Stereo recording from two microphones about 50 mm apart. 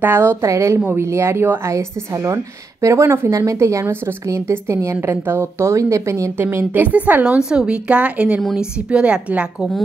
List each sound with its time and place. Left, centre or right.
0.0 s a woman's voice: right
0.4 s a woman's voice: right
0.7 s a woman's voice: right
1.0 s a woman's voice: right
1.6 s a woman's voice: right
4.3 s a woman's voice: right
5.0 s a woman's voice: right
6.3 s a woman's voice: right
6.7 s a woman's voice: right
7.2 s a woman's voice: centre